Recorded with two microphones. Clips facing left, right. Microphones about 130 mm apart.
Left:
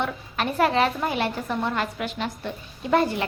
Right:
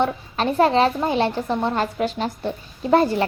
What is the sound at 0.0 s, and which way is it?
A woman's voice, 30° right (ahead or behind).